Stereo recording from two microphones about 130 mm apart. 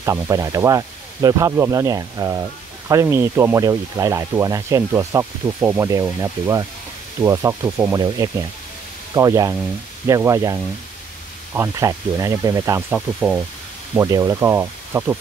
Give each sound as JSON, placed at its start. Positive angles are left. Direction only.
{"t": 0.0, "sound": "speech", "side_deg": -25}
{"t": 12.9, "sound": "speech", "side_deg": -10}
{"t": 13.9, "sound": "speech", "side_deg": -25}